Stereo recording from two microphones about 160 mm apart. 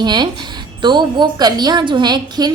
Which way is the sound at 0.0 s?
30° right (ahead or behind).